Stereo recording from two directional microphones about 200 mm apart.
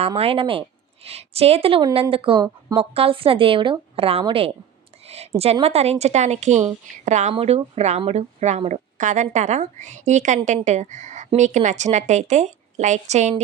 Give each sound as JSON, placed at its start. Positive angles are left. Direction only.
{"t": 0.2, "sound": "speech", "side_deg": -30}
{"t": 5.0, "sound": "a sound", "side_deg": -30}
{"t": 5.4, "sound": "a woman's voice", "side_deg": -30}